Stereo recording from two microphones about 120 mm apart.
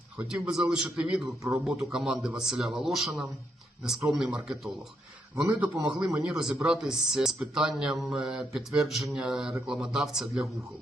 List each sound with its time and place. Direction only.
0.2 s a man's voice: 5° right (ahead or behind)
1.6 s mantra: 5° right (ahead or behind)
5.5 s a man's voice: 10° right (ahead or behind)
6.1 s mantra: 5° right (ahead or behind)